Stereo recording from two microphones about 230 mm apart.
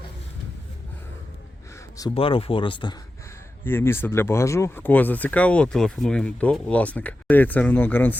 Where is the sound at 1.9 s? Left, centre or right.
Centre.